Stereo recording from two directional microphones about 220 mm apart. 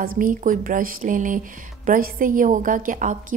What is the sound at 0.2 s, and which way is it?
A woman's voice, 40° right (ahead or behind).